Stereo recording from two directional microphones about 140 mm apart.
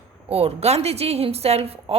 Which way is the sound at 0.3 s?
45° right (ahead or behind).